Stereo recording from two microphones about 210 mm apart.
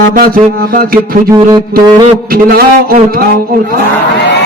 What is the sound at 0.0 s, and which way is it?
Music, 45° right (ahead or behind).